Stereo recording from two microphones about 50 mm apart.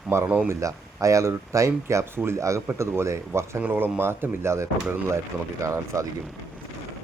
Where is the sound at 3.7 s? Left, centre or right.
Right.